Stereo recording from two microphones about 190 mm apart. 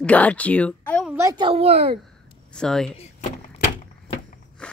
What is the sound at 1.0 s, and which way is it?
Speech, 15° right (ahead or behind).